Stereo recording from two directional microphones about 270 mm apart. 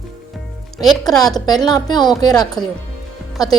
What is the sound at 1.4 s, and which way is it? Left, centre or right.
A woman's voice, centre.